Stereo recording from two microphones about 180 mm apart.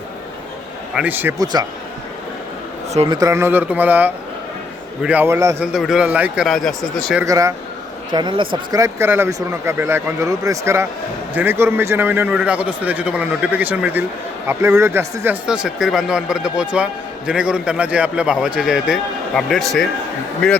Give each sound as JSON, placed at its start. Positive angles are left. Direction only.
{"t": 0.9, "sound": "a man's voice", "side_deg": -10}
{"t": 2.9, "sound": "speech", "side_deg": -35}
{"t": 3.2, "sound": "a man's voice", "side_deg": -15}
{"t": 5.6, "sound": "speech", "side_deg": -5}
{"t": 7.3, "sound": "a man's voice", "side_deg": -20}